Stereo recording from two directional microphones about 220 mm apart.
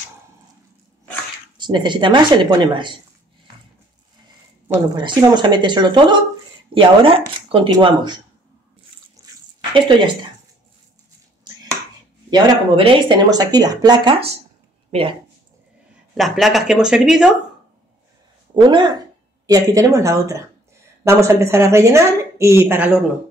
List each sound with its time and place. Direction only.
1.6 s speech: 20° right (ahead or behind)
4.9 s speech: 20° right (ahead or behind)
12.3 s speech: 20° right (ahead or behind)
16.2 s speech: centre (ahead or behind)
18.5 s a woman's voice: 20° right (ahead or behind)